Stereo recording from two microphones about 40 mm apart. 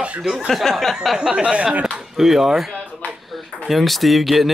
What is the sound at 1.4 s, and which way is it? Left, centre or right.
Speech, right.